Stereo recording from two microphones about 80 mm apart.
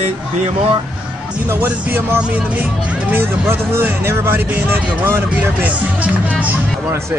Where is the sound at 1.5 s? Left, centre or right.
Right.